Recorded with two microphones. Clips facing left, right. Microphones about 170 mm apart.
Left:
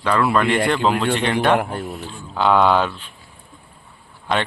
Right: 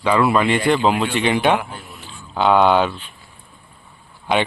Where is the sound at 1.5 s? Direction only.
50° left (ahead or behind).